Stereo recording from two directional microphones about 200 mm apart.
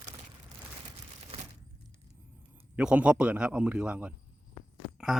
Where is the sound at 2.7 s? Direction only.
5° right (ahead or behind).